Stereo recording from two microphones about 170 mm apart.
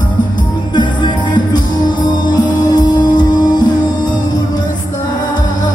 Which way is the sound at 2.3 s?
25° left (ahead or behind).